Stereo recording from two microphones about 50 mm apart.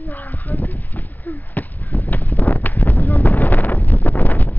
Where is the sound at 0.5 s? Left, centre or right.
Left.